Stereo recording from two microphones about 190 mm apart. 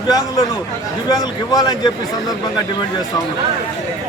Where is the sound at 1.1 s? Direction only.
20° left (ahead or behind).